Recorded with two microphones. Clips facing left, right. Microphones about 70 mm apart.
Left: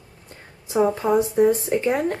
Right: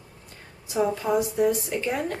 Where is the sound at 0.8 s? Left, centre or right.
Left.